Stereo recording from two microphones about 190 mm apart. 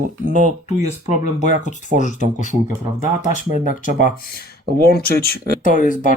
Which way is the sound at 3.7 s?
45° left (ahead or behind).